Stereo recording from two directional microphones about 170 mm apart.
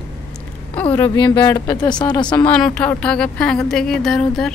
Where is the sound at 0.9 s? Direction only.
15° left (ahead or behind).